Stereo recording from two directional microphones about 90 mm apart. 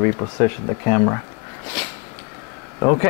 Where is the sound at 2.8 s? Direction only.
25° left (ahead or behind).